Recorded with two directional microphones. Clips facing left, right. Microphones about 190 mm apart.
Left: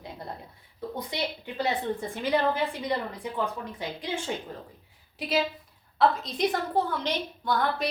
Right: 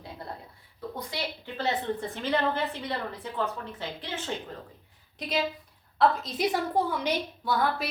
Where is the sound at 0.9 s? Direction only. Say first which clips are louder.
Left 3 dB; 15° left (ahead or behind).